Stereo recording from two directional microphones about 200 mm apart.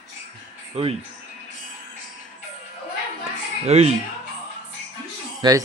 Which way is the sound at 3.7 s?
35° right (ahead or behind).